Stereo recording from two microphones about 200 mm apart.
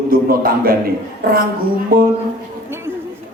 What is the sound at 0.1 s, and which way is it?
Speech, 45° right (ahead or behind).